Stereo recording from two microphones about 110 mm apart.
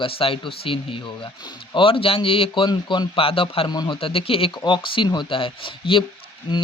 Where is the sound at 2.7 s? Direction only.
40° left (ahead or behind); by 3.7 s 60° left (ahead or behind).